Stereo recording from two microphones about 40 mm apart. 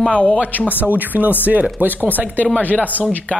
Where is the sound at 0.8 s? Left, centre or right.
Right.